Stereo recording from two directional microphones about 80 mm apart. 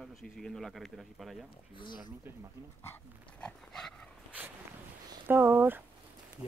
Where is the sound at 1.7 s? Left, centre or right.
Left.